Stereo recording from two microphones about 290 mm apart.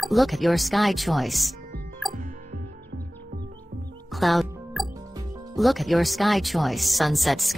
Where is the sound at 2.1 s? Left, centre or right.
Right.